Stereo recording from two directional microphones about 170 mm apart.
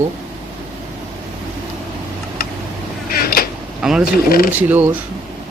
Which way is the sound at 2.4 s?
60° left (ahead or behind).